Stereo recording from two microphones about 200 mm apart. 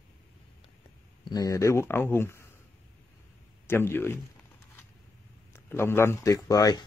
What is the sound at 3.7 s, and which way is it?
Speech, 10° left (ahead or behind).